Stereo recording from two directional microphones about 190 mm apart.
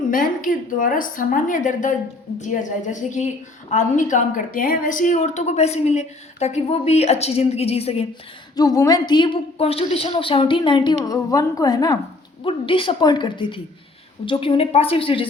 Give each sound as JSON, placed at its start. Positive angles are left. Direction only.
{"t": 0.1, "sound": "a woman's voice", "side_deg": 45}
{"t": 8.5, "sound": "a woman's voice", "side_deg": 20}